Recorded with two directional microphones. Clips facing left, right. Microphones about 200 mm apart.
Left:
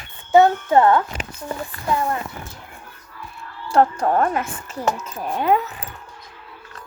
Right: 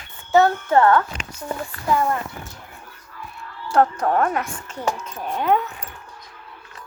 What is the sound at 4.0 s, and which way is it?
A woman's voice, 5° left (ahead or behind).